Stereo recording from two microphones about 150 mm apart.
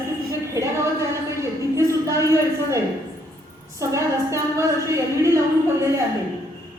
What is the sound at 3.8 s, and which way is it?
A woman's voice, 20° right (ahead or behind).